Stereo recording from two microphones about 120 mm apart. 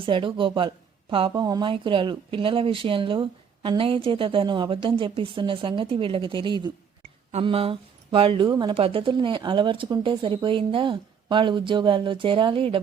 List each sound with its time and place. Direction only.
0.0 s speech: 45° right (ahead or behind)
1.3 s speech: 35° right (ahead or behind)
8.8 s speech: 50° right (ahead or behind)